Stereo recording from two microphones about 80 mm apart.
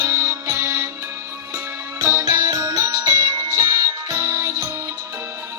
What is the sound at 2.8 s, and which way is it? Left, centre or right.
Music, right.